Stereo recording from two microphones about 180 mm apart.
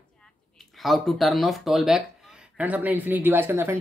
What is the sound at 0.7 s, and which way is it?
Speech, centre (ahead or behind).